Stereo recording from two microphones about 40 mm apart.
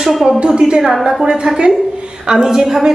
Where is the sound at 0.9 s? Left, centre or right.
Centre.